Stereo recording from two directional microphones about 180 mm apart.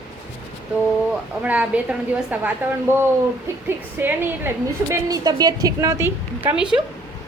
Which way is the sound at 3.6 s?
10° right (ahead or behind).